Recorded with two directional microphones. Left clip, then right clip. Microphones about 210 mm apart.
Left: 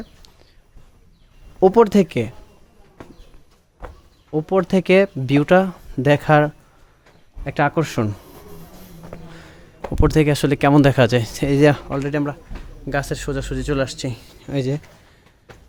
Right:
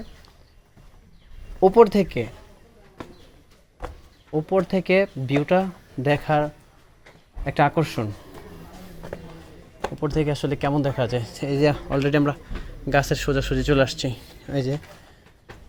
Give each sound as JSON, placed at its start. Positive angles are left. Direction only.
{"t": 1.5, "sound": "speech", "side_deg": 30}
{"t": 4.3, "sound": "speech", "side_deg": 25}
{"t": 7.4, "sound": "speech", "side_deg": 20}
{"t": 9.9, "sound": "speech", "side_deg": 40}
{"t": 11.9, "sound": "speech", "side_deg": 5}
{"t": 14.4, "sound": "speech", "side_deg": 25}